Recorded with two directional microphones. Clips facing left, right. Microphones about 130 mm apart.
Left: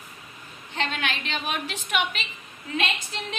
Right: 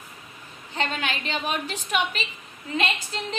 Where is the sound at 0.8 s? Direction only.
35° right (ahead or behind).